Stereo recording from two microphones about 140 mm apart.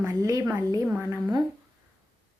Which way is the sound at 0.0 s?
25° right (ahead or behind).